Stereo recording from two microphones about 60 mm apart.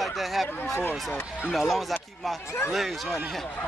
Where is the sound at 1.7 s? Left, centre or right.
Centre.